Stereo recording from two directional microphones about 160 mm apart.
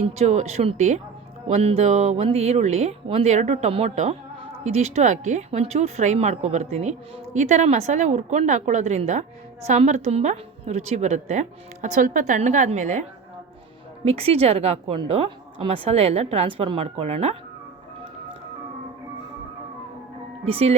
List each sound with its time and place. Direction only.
0.0 s a woman's voice: 45° right (ahead or behind)
20.4 s a woman's voice: 40° right (ahead or behind)